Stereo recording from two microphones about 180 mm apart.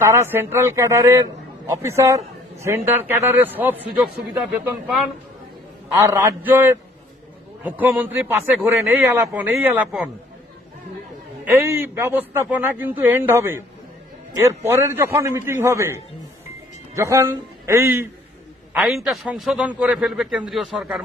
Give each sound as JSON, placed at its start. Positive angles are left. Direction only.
{"t": 0.0, "sound": "a man's voice", "side_deg": -15}
{"t": 5.9, "sound": "a man's voice", "side_deg": -15}
{"t": 11.4, "sound": "a man's voice", "side_deg": -15}
{"t": 18.9, "sound": "a man's voice", "side_deg": 0}